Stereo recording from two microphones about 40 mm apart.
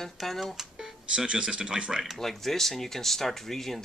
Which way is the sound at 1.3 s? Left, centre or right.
Right.